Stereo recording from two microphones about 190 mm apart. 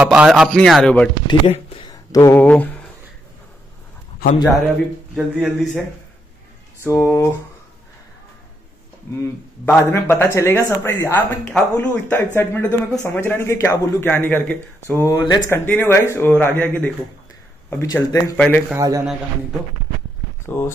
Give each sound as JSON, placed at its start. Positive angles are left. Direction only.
{"t": 0.0, "sound": "a man's voice", "side_deg": -5}
{"t": 1.2, "sound": "speech", "side_deg": 30}
{"t": 5.1, "sound": "a man's voice", "side_deg": -5}
{"t": 6.8, "sound": "speech", "side_deg": 15}
{"t": 9.7, "sound": "speech", "side_deg": 10}
{"t": 15.5, "sound": "speech", "side_deg": 10}
{"t": 18.8, "sound": "a man's voice", "side_deg": -15}
{"t": 20.4, "sound": "speech", "side_deg": 15}